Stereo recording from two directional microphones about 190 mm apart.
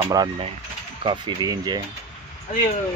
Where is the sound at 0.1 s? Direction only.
20° right (ahead or behind).